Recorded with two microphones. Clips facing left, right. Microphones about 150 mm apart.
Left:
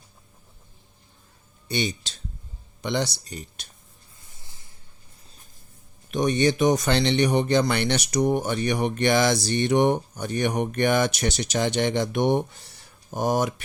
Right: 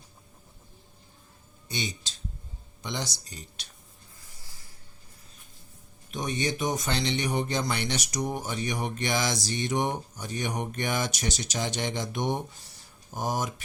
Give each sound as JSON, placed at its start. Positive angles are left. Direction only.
{"t": 1.6, "sound": "speech", "side_deg": 65}
{"t": 4.2, "sound": "a sound", "side_deg": 20}
{"t": 6.1, "sound": "speech", "side_deg": 70}